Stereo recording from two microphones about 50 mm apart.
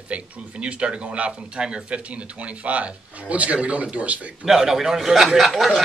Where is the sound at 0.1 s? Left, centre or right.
Right.